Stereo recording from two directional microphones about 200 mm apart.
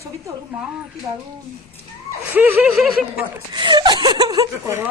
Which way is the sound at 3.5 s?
20° right (ahead or behind).